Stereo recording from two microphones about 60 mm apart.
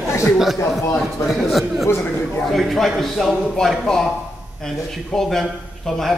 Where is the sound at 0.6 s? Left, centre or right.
Left.